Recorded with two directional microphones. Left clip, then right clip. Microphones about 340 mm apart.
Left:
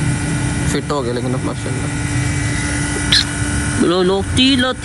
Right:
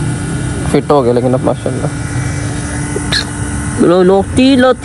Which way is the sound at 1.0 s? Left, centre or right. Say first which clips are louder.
Right 10 dB; right.